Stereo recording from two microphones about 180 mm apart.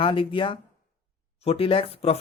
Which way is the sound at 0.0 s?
30° left (ahead or behind).